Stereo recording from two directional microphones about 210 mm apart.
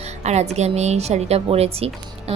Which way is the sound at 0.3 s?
30° right (ahead or behind).